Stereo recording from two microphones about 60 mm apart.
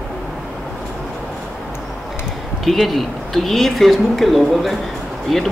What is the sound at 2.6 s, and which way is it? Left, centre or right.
Speech, centre.